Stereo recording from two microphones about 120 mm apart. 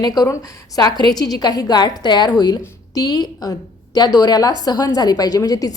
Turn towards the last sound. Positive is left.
turn(degrees=30)  # may be behind; listen again after turning